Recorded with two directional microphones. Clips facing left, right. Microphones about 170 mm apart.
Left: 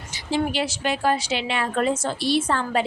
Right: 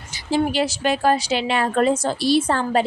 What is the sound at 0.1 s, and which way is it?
A woman's voice, 40° right (ahead or behind).